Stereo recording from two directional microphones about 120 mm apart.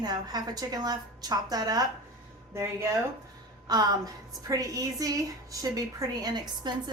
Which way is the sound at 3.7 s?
35° right (ahead or behind).